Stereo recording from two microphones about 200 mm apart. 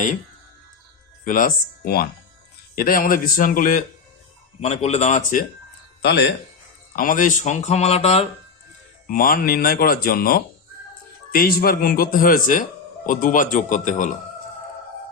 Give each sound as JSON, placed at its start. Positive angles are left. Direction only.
{"t": 1.2, "sound": "speech", "side_deg": 40}
{"t": 6.0, "sound": "speech", "side_deg": 55}
{"t": 6.9, "sound": "speech", "side_deg": 45}
{"t": 9.0, "sound": "speech", "side_deg": 45}